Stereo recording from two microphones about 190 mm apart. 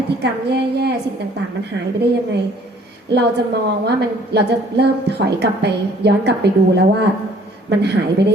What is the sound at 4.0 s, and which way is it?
A woman's voice, 60° right (ahead or behind).